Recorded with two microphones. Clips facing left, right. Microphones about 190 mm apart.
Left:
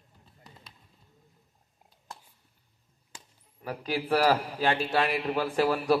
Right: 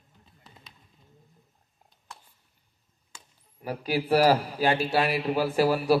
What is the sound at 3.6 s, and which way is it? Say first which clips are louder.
A man's voice: right 3 dB; 10° right (ahead or behind).